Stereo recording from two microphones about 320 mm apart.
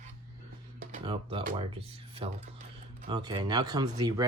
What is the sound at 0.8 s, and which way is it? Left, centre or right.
Speech, right.